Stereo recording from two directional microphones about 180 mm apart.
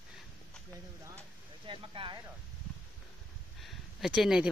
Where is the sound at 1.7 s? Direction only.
25° right (ahead or behind).